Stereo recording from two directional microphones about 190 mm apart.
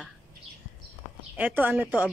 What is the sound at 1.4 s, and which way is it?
Speech, 10° right (ahead or behind).